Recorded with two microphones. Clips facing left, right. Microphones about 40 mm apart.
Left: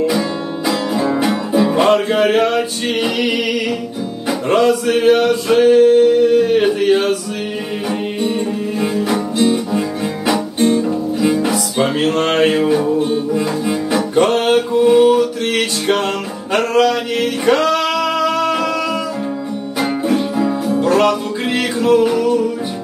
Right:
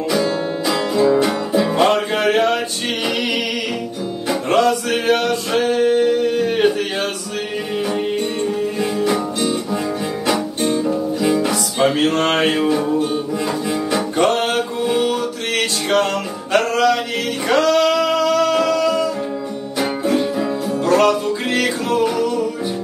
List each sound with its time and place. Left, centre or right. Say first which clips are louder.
0.2 s music: right 1 dB; centre
4.3 s music: left 2 dB; centre
9.4 s guitar: left 5 dB; centre
10.6 s music: left 3 dB; centre
18.3 s music: right 1 dB; left
18.6 s music: right 2 dB; centre
20.1 s music: left 1 dB; centre
20.8 s music: even; centre